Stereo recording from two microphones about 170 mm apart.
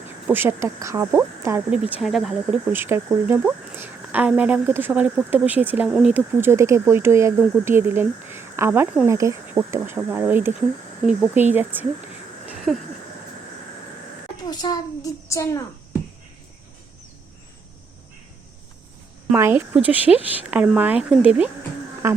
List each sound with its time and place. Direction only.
0.3 s speech: 10° right (ahead or behind)
2.7 s speech: 15° right (ahead or behind)
11.5 s speech: 10° right (ahead or behind)
12.5 s a sound: centre (ahead or behind)
14.4 s a child's voice: 25° left (ahead or behind)
19.3 s speech: 15° right (ahead or behind)